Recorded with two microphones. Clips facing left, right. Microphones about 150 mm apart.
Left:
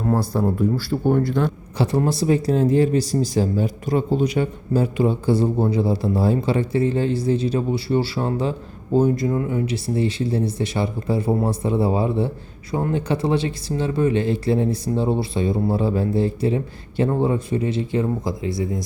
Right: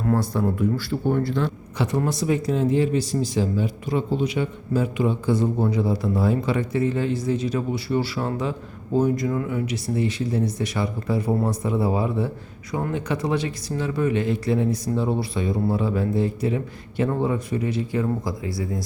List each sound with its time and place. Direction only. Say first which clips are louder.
0.0 s speech: left 2 dB; 30° left (ahead or behind)
1.0 s a man's voice: left 4 dB; 50° left (ahead or behind)
1.8 s a man's voice: left 3 dB; 30° left (ahead or behind)